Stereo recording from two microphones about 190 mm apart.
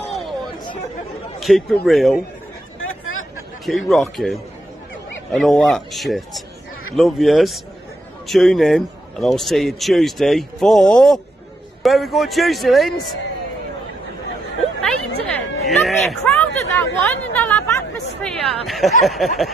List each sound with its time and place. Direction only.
1.4 s a man's voice: centre (ahead or behind)
2.8 s a sound: 90° left
3.6 s a man's voice: centre (ahead or behind)
15.2 s music: 5° left (ahead or behind)
16.3 s speech: 10° left (ahead or behind)
18.7 s a man's voice: centre (ahead or behind)